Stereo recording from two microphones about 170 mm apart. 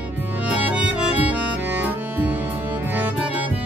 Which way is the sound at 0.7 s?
5° right (ahead or behind).